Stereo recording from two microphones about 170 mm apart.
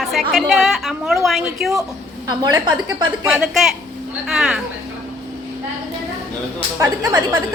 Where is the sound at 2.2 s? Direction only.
25° right (ahead or behind).